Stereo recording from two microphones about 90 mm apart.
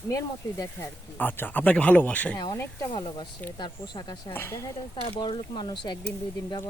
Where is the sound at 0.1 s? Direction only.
35° left (ahead or behind).